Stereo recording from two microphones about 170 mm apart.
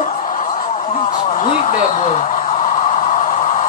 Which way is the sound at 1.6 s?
45° left (ahead or behind).